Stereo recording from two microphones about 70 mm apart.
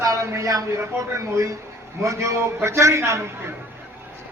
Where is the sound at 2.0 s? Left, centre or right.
Right.